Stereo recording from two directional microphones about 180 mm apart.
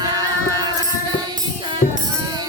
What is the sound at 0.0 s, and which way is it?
Music, 20° right (ahead or behind).